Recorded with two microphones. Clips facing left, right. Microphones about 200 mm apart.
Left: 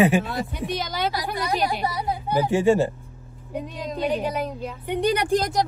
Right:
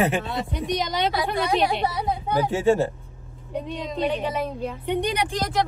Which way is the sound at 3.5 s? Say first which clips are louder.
Right 1 dB; centre (ahead or behind).